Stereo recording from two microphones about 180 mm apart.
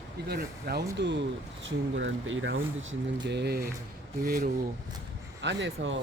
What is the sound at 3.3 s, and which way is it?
Speech, 65° right (ahead or behind).